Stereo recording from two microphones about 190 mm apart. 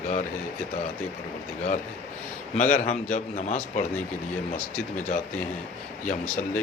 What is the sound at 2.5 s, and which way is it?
A man's voice, 40° left (ahead or behind).